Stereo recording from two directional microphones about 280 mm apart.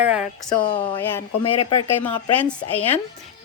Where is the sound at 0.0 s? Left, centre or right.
Centre.